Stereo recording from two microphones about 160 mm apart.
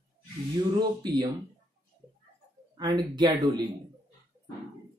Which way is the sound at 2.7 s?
25° right (ahead or behind).